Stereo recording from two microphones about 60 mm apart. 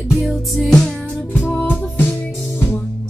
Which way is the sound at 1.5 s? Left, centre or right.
Left.